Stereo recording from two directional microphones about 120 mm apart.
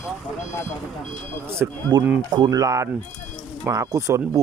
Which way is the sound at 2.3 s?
35° right (ahead or behind).